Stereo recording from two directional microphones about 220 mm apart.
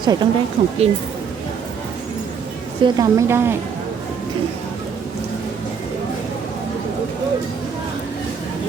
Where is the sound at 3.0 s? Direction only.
15° right (ahead or behind).